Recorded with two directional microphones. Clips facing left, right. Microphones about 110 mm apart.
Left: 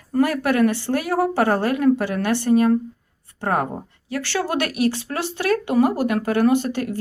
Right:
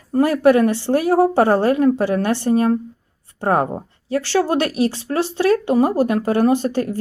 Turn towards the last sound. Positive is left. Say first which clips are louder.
# right 2 dB
turn(degrees=-35)  # may be behind; listen again after turning